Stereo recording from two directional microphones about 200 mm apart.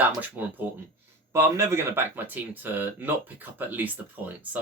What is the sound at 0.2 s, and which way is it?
Speech, 10° right (ahead or behind).